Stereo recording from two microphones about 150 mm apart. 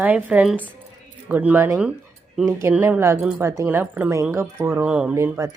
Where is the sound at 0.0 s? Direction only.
10° right (ahead or behind).